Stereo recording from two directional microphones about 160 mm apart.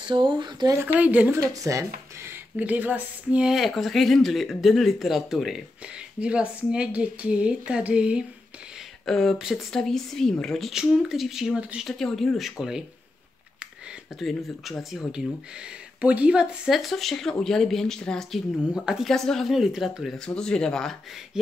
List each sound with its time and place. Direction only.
0.0 s speech: 30° right (ahead or behind)
0.9 s speech: 10° right (ahead or behind)
1.5 s speech: 20° right (ahead or behind)
2.2 s speech: 10° right (ahead or behind)
14.2 s speech: centre (ahead or behind)